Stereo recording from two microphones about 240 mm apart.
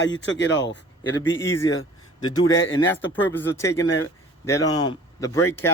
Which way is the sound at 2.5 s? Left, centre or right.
Left.